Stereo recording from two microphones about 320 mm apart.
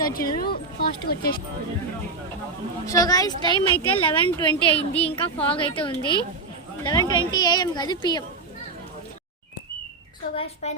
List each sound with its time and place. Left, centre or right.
0.0 s speech: left
2.8 s a woman's voice: centre
5.1 s a woman's voice: centre
10.3 s speech: centre